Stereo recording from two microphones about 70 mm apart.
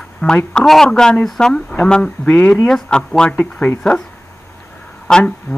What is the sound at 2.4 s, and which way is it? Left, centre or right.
Speech, left.